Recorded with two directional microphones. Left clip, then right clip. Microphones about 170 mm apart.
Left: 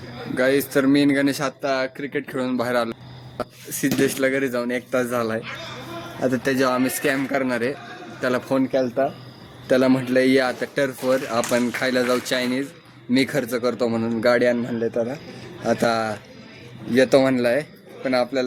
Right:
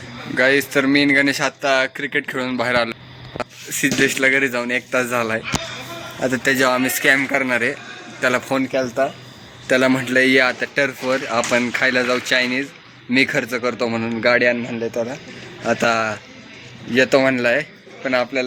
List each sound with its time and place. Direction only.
0.3 s speech: 5° left (ahead or behind)
11.9 s speech: 10° left (ahead or behind)
14.7 s a man's voice: centre (ahead or behind)